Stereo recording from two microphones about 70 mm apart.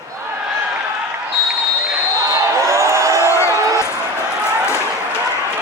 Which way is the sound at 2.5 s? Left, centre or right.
Right.